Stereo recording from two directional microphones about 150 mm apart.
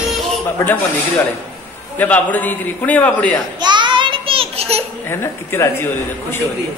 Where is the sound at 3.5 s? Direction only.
30° right (ahead or behind).